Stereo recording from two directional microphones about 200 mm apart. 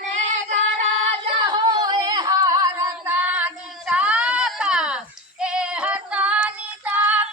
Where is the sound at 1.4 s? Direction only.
20° right (ahead or behind).